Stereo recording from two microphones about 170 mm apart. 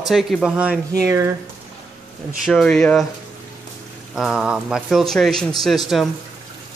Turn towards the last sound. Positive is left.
turn(degrees=0)  # may be behind; listen again after turning